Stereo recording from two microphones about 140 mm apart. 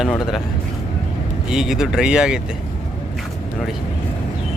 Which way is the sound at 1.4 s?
5° right (ahead or behind).